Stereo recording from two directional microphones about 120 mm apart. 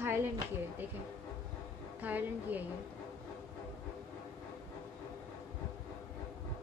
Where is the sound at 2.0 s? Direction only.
15° right (ahead or behind).